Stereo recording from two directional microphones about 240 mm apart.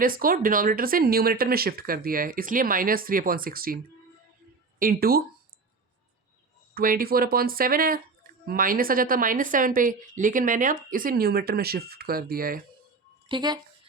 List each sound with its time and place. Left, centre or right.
0.0 s a woman's voice: right
4.8 s a woman's voice: right
6.7 s a woman's voice: right
13.2 s speech: centre